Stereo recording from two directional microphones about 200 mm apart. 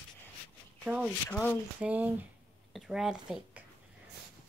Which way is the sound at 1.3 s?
10° left (ahead or behind).